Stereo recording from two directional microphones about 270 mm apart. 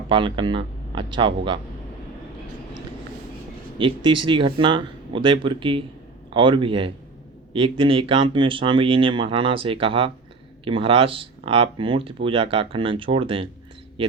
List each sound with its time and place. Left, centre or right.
0.1 s speech: centre
3.8 s speech: centre